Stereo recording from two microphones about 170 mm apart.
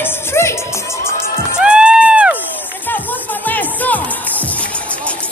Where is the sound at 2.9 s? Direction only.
10° left (ahead or behind).